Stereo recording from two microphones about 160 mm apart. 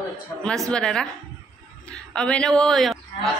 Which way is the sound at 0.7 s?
5° left (ahead or behind).